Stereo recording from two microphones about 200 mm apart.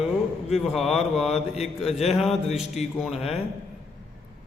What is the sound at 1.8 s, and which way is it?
Mantra, 30° left (ahead or behind).